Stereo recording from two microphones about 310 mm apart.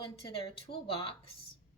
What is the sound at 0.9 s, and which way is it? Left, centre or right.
Speech, centre.